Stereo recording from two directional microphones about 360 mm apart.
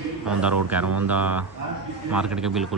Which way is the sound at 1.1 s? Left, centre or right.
Centre.